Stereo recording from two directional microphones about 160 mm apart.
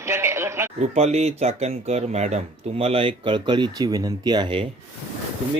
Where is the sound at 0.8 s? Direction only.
45° right (ahead or behind).